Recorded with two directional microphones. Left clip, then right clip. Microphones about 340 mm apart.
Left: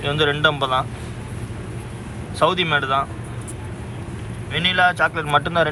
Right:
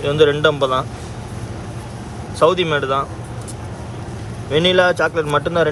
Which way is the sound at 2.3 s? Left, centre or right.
Centre.